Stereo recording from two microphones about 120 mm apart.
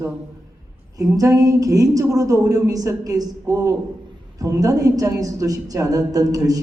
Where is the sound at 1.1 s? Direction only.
30° right (ahead or behind).